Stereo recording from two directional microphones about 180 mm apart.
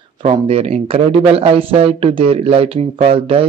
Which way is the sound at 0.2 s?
35° right (ahead or behind).